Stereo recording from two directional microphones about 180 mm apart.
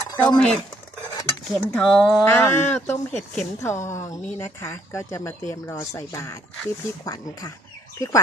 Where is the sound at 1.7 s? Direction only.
5° left (ahead or behind).